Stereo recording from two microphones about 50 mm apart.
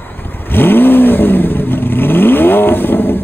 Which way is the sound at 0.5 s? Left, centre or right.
Left.